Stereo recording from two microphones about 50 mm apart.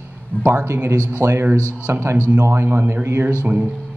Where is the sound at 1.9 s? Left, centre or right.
Right.